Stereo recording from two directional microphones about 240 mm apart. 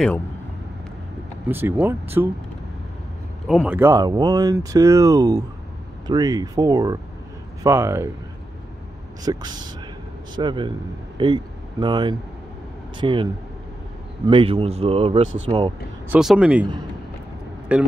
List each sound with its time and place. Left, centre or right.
1.5 s speech: centre
3.4 s speech: centre
9.2 s speech: centre
16.1 s speech: centre
17.7 s speech: centre